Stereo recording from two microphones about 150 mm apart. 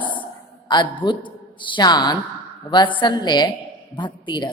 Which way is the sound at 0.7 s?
30° left (ahead or behind).